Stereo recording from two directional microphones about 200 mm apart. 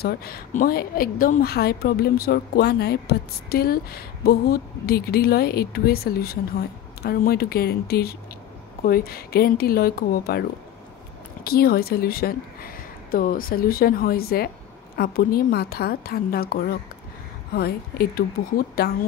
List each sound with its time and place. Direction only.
0.0 s a woman's voice: 50° left (ahead or behind)
11.4 s a woman's voice: 50° left (ahead or behind)